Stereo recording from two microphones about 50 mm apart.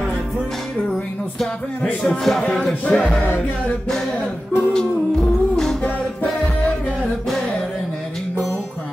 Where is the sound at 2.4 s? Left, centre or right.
Centre.